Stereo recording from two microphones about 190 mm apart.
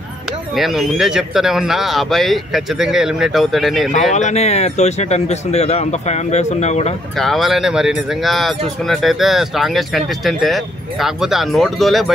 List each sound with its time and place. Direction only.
0.6 s speech: centre (ahead or behind)
4.1 s speech: 35° left (ahead or behind)
7.2 s speech: centre (ahead or behind)